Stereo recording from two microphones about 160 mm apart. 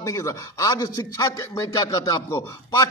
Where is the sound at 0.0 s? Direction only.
20° left (ahead or behind).